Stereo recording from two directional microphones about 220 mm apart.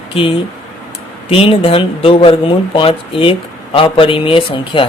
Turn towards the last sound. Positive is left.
turn(degrees=25)  # may be behind; listen again after turning